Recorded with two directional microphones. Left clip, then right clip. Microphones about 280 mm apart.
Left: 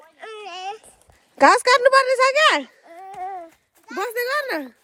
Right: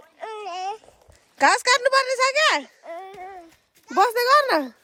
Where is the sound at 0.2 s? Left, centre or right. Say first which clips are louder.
Right 3 dB; centre.